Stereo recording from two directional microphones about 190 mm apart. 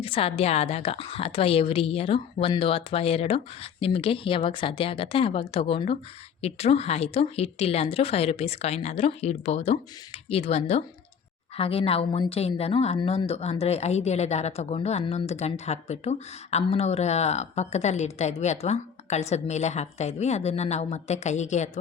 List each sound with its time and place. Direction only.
0.0 s a woman's voice: 30° left (ahead or behind)